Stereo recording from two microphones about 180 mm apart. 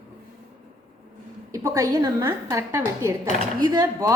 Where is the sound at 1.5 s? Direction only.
15° right (ahead or behind).